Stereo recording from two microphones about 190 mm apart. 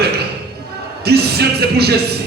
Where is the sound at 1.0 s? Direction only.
55° right (ahead or behind).